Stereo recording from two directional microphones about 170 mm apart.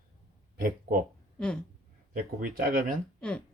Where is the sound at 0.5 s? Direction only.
55° right (ahead or behind).